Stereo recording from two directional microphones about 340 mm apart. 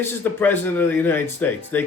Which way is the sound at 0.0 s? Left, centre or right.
Centre.